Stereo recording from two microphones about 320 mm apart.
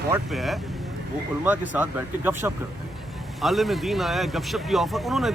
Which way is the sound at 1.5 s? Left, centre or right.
Centre.